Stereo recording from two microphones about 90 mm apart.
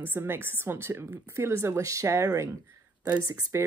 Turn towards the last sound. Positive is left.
turn(degrees=-35)  # may be behind; listen again after turning